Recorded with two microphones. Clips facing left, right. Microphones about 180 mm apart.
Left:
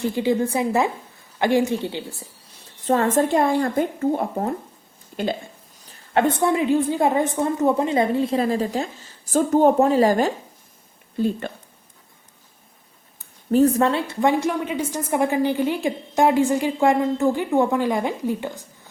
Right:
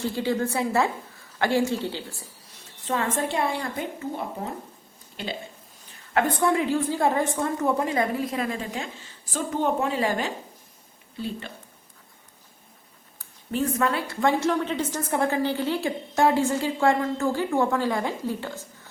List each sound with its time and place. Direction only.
0.0 s a woman's voice: 15° left (ahead or behind)
2.8 s speech: 40° left (ahead or behind)
6.1 s a woman's voice: 25° left (ahead or behind); by 11.5 s 50° left (ahead or behind)
13.5 s a woman's voice: 40° left (ahead or behind)
13.8 s a woman's voice: 25° left (ahead or behind)